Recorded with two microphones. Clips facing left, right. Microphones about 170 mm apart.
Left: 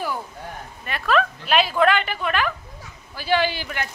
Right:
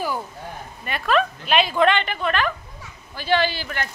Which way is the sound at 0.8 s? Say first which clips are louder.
Even; centre (ahead or behind).